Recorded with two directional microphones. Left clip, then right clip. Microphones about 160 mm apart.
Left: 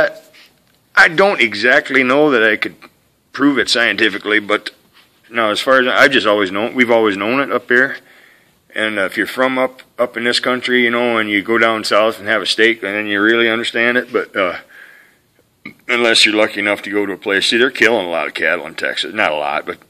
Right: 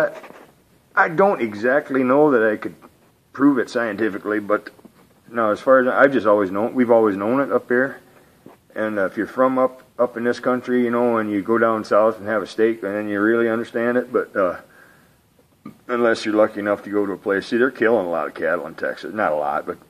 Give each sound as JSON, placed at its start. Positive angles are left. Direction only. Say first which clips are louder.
{"t": 0.9, "sound": "speech", "louder": "left 6 dB", "side_deg": 30}
{"t": 15.6, "sound": "speech", "louder": "left 5 dB", "side_deg": 30}